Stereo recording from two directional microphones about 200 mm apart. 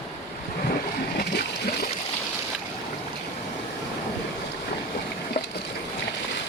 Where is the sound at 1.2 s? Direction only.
50° left (ahead or behind).